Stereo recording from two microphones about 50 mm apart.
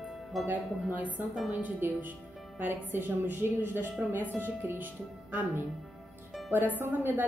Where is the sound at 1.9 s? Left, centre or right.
Right.